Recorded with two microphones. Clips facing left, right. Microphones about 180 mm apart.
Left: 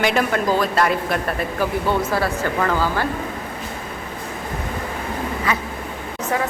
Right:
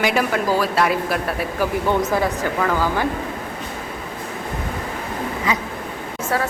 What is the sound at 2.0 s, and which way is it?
Speech, 15° right (ahead or behind).